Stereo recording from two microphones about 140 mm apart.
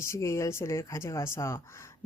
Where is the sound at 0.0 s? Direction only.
20° left (ahead or behind).